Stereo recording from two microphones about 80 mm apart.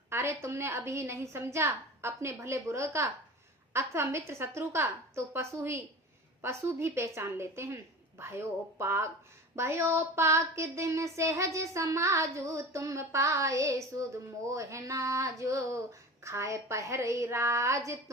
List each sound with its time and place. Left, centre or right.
0.1 s a woman's voice: right